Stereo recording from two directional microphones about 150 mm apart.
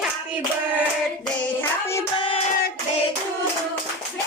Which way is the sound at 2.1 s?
35° left (ahead or behind).